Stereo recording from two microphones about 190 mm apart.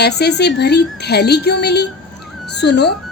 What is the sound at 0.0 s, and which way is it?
Speech, 60° left (ahead or behind).